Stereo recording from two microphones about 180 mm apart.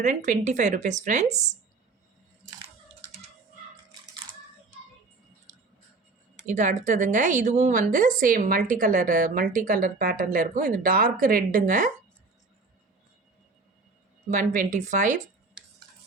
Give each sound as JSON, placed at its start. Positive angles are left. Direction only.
{"t": 0.0, "sound": "a woman's voice", "side_deg": -45}
{"t": 6.4, "sound": "a woman's voice", "side_deg": -45}
{"t": 14.3, "sound": "a woman's voice", "side_deg": -45}